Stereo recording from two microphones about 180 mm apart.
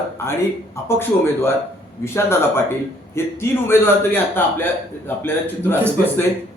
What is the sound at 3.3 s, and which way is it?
A man's voice, 15° left (ahead or behind).